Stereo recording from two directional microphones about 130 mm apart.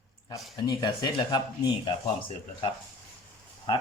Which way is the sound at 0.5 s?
30° left (ahead or behind).